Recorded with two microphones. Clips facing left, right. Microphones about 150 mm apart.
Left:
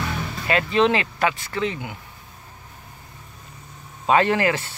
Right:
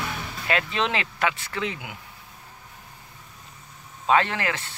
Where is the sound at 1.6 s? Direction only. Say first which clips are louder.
Left 5 dB; 5° right (ahead or behind).